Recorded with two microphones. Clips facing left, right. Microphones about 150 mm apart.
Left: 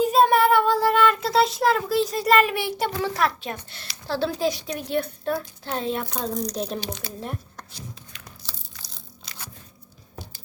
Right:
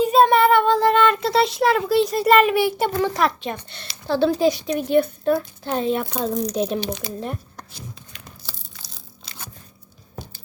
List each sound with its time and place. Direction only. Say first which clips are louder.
0.0 s child singing: right 3 dB; centre (ahead or behind)
2.0 s a child's voice: right 4 dB; centre (ahead or behind)
9.2 s scissors: right 2 dB; 25° right (ahead or behind)